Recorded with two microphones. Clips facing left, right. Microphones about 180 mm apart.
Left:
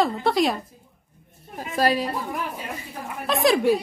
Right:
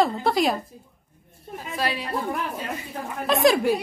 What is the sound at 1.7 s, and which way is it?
Speech, 40° left (ahead or behind).